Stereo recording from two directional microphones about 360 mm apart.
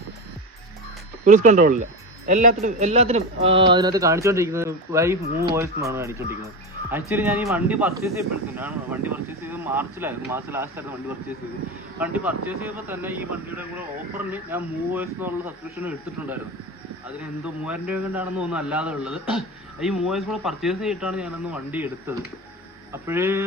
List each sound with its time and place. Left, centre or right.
1.2 s a man's voice: right
11.9 s speech: centre
14.3 s speech: centre
17.4 s a man's voice: centre